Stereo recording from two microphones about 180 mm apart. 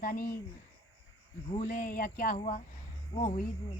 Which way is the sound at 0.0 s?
55° left (ahead or behind).